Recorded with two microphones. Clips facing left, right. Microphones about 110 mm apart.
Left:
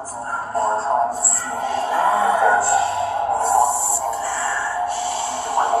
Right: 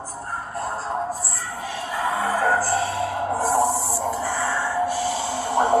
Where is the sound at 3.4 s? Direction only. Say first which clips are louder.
Left 2 dB; 65° left (ahead or behind).